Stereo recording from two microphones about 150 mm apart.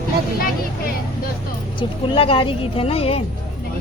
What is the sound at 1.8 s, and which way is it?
Speech, 35° left (ahead or behind).